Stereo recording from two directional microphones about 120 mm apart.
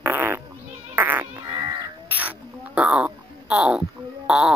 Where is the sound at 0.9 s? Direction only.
15° right (ahead or behind).